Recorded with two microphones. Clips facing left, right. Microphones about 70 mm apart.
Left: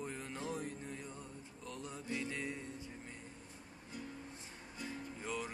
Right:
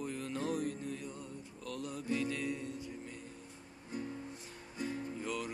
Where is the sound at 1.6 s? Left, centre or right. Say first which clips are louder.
Right 5 dB; left.